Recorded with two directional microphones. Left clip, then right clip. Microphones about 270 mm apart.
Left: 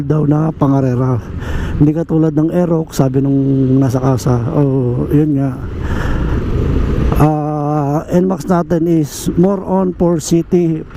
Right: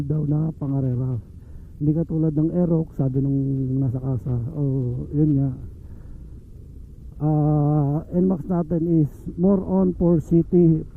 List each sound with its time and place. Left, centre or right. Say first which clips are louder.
0.1 s a man's voice: left 14 dB; centre
7.1 s a man's voice: left 8 dB; centre